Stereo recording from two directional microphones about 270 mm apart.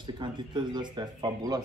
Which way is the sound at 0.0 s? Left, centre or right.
Centre.